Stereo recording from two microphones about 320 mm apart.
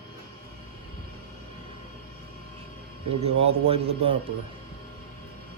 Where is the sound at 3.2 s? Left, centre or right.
Centre.